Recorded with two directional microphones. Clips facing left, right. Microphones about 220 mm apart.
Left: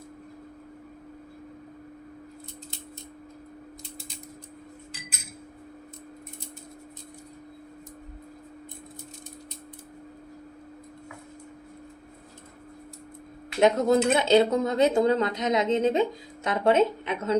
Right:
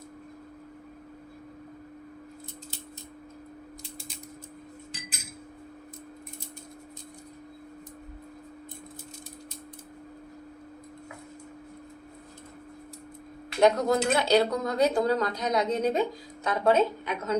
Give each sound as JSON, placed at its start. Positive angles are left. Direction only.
{"t": 13.6, "sound": "speech", "side_deg": 25}